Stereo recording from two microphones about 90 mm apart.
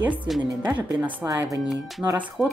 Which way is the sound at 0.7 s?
20° right (ahead or behind).